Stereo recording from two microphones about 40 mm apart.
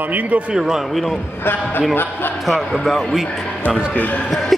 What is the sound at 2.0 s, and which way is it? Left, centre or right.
Speech, left.